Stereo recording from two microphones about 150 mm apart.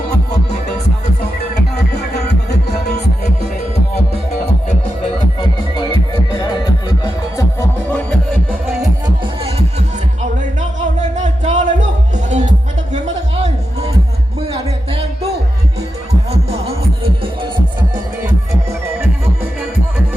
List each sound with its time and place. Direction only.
1.5 s music: 90° left
5.4 s music: 30° left (ahead or behind)
7.9 s music: 5° left (ahead or behind)
9.2 s music: 40° right (ahead or behind)
11.0 s music: 50° right (ahead or behind)
16.3 s music: 45° right (ahead or behind)